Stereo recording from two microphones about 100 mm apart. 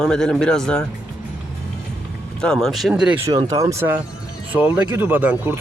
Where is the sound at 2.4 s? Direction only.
5° left (ahead or behind).